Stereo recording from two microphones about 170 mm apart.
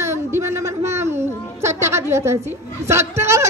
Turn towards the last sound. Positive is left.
turn(degrees=-15)  # may be behind; listen again after turning